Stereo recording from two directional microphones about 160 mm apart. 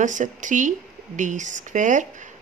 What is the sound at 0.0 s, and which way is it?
Speech, 50° right (ahead or behind).